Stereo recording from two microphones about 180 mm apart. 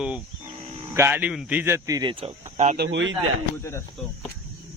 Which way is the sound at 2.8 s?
90° right.